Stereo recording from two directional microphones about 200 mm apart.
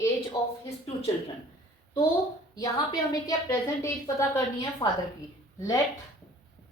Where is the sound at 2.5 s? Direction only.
20° left (ahead or behind).